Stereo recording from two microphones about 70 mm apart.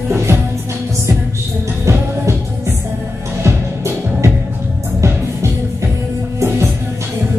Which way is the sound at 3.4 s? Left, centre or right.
Right.